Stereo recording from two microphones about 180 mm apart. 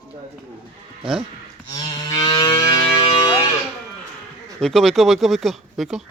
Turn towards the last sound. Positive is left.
turn(degrees=0)  # may be behind; listen again after turning